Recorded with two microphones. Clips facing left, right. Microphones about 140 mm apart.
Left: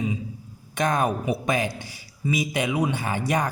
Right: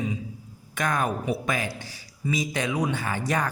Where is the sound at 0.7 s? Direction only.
20° left (ahead or behind).